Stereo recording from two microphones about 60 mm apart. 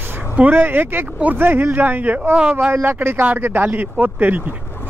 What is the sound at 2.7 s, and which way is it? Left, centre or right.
Speech, right.